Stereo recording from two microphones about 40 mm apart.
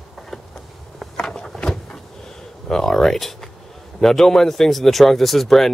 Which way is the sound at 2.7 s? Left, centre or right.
Centre.